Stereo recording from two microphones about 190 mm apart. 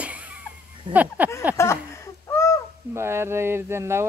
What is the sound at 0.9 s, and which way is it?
Speech, 10° right (ahead or behind).